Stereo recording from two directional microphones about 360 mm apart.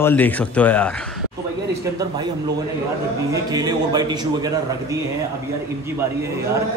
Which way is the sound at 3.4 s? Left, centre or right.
Centre.